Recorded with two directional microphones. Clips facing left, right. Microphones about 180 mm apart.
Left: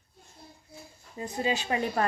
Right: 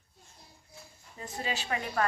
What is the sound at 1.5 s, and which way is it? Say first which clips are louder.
Speech: left 6 dB; 25° left (ahead or behind).